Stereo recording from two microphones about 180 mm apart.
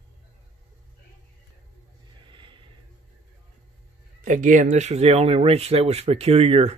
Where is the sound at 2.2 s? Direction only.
25° right (ahead or behind).